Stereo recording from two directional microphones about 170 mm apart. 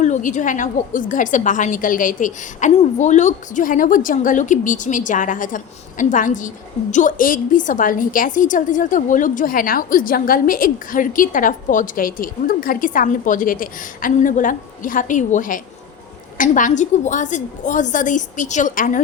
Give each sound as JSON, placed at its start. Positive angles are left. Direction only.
{"t": 0.0, "sound": "a woman's voice", "side_deg": 45}